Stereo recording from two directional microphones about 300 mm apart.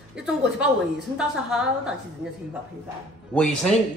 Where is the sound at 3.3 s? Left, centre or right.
Centre.